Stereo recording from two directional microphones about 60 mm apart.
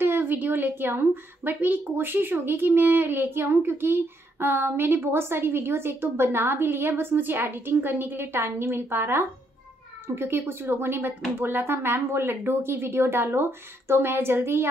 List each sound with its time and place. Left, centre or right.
0.0 s speech: right